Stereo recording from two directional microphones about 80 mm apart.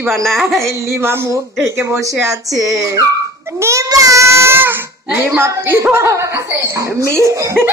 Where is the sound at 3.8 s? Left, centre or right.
Right.